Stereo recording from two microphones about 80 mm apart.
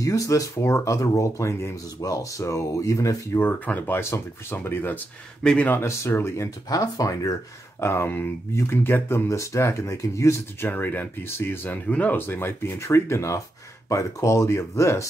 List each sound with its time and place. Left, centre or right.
0.0 s speech: left
3.3 s speech: left
5.4 s speech: centre
5.9 s speech: left
7.8 s speech: left
10.7 s speech: left